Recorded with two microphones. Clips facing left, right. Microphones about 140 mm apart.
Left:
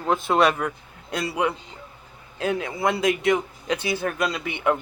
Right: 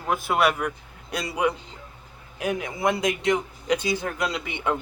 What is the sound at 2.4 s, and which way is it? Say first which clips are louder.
Speech: left 1 dB; 15° right (ahead or behind).